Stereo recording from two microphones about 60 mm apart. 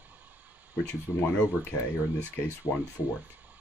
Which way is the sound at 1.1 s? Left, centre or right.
Left.